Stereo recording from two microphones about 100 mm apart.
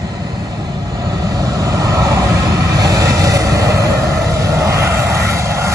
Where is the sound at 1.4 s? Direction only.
35° right (ahead or behind).